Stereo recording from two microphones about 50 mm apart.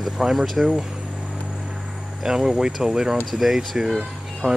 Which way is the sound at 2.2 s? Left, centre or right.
Centre.